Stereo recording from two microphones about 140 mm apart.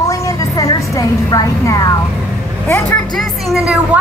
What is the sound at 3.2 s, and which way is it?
Speech, centre (ahead or behind).